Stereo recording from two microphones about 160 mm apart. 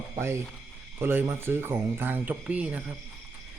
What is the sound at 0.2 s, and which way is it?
Speech, 15° right (ahead or behind).